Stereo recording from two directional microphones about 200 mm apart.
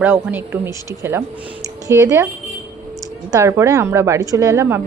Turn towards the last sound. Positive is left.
turn(degrees=-10)  # may be behind; listen again after turning